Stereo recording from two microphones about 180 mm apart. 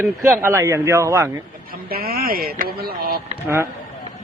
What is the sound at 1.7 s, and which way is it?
Speech, 55° right (ahead or behind).